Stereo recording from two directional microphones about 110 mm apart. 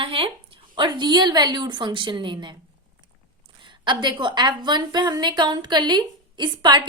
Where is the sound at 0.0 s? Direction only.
55° right (ahead or behind).